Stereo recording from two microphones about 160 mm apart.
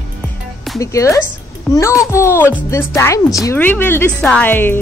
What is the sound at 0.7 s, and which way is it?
Speech, 20° left (ahead or behind).